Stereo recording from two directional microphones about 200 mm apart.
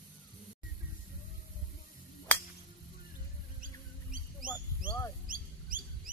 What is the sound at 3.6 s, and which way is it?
Bird, 45° right (ahead or behind).